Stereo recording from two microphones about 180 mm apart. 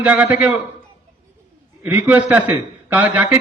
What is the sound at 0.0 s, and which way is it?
Speech, 5° right (ahead or behind).